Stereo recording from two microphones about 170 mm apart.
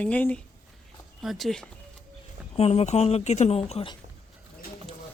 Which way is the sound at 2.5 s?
35° left (ahead or behind).